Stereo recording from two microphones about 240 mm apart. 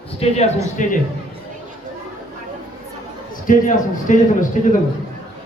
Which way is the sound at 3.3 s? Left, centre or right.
Left.